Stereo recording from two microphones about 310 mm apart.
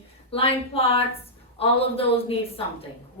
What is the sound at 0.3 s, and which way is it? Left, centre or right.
A woman's voice, centre.